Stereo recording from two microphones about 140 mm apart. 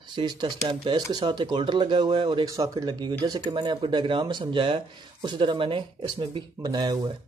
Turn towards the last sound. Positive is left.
turn(degrees=-30)  # may be behind; listen again after turning